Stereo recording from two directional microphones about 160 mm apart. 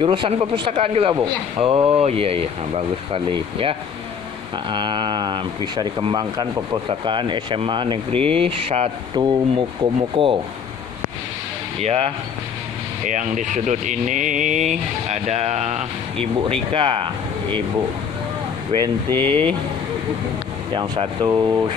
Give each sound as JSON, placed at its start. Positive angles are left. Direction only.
{"t": 0.0, "sound": "speech", "side_deg": -35}
{"t": 9.1, "sound": "speech", "side_deg": -25}
{"t": 11.8, "sound": "speech", "side_deg": -40}
{"t": 16.7, "sound": "speech", "side_deg": -30}
{"t": 18.8, "sound": "speech", "side_deg": 15}
{"t": 20.7, "sound": "speech", "side_deg": -30}